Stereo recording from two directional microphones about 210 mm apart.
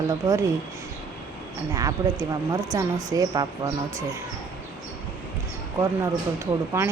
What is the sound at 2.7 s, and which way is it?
Speech, 15° right (ahead or behind).